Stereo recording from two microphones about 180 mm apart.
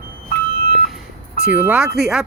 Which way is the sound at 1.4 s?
10° right (ahead or behind).